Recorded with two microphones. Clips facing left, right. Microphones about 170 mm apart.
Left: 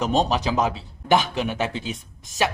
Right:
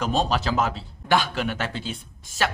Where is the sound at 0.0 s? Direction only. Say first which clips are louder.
Left 2 dB; 20° left (ahead or behind).